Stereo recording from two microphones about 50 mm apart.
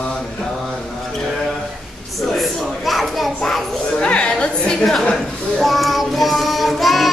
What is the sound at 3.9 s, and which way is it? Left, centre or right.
Music, left.